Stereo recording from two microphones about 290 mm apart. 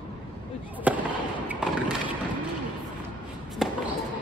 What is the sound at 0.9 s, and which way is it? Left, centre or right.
Fireworks, centre.